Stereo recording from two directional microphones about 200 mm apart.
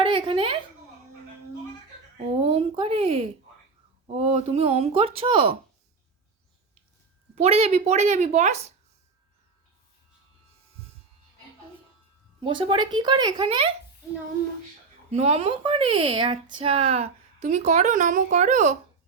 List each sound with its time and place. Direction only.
0.0 s a sound: 25° right (ahead or behind)
2.4 s a sound: 25° right (ahead or behind)
4.1 s speech: 30° right (ahead or behind)
7.3 s speech: 30° right (ahead or behind)
12.4 s speech: 25° right (ahead or behind)
15.1 s speech: 30° right (ahead or behind)